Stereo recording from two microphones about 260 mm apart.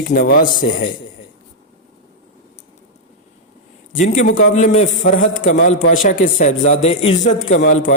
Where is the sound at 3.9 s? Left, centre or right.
Left.